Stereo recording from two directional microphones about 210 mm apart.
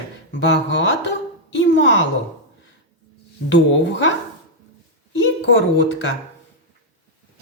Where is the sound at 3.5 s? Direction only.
60° left (ahead or behind).